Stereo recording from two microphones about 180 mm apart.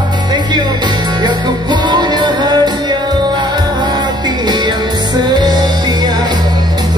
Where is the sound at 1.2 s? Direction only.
25° right (ahead or behind).